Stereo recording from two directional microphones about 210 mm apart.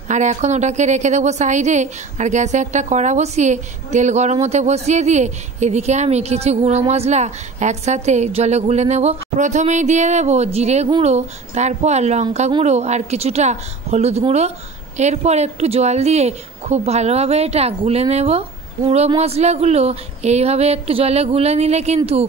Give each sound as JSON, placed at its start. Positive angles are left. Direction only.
{"t": 0.1, "sound": "a woman's voice", "side_deg": -35}